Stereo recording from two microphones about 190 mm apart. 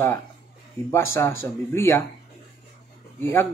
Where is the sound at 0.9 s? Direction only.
15° left (ahead or behind).